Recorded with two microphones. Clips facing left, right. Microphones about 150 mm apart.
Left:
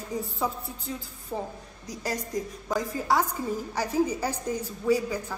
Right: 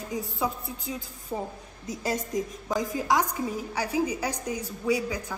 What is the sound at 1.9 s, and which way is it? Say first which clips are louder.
Speech: right 2 dB; 25° right (ahead or behind).